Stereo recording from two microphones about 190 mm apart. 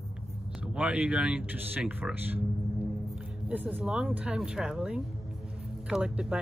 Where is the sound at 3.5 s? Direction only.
5° right (ahead or behind).